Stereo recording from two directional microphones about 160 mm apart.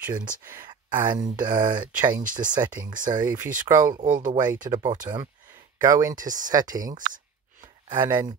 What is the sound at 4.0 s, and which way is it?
Speech, 55° right (ahead or behind).